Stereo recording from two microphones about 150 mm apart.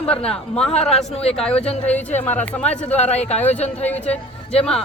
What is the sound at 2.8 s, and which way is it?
Speech, 45° left (ahead or behind).